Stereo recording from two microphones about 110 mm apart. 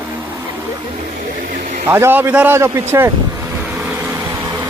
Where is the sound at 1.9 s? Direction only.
20° right (ahead or behind).